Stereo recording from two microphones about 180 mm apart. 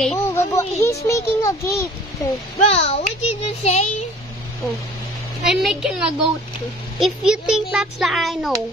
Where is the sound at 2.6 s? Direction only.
35° left (ahead or behind).